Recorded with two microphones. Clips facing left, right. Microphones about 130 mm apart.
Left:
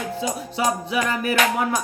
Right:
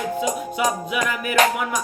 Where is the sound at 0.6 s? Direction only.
35° left (ahead or behind).